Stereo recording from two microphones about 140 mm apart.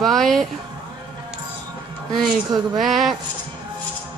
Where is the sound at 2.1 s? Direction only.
30° right (ahead or behind).